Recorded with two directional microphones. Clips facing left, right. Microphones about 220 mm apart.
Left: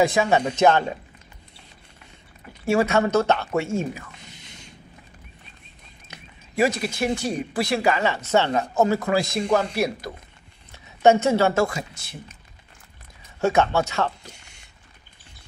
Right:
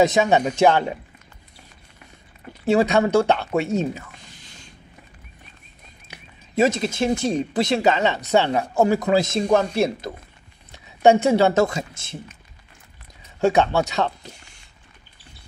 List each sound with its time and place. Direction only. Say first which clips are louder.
0.0 s speech: right 2 dB; 20° right (ahead or behind)
2.6 s speech: right 2 dB; 20° right (ahead or behind)
4.3 s creak: left 1 dB; 20° left (ahead or behind)
6.0 s speech: even; 20° right (ahead or behind)
13.4 s speech: right 2 dB; 15° right (ahead or behind)